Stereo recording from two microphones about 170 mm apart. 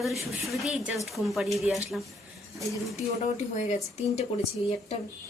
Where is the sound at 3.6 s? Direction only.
40° left (ahead or behind).